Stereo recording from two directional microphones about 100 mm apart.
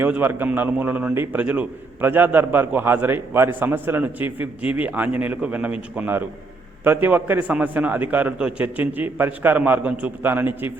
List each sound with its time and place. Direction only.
0.0 s a man's voice: 20° right (ahead or behind)